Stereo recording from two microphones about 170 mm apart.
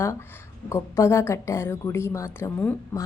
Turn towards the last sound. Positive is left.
turn(degrees=15)  # may be behind; listen again after turning